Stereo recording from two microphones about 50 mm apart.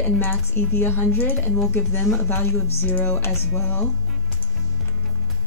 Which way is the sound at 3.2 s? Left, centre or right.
Left.